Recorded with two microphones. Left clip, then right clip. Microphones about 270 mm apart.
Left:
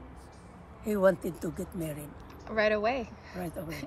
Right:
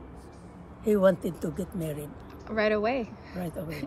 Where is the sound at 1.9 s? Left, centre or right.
Left.